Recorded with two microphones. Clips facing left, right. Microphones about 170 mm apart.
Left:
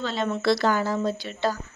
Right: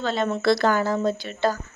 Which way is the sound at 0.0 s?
50° right (ahead or behind).